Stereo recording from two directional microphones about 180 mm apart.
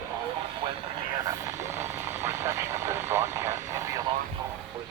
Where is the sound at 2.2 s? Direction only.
15° right (ahead or behind).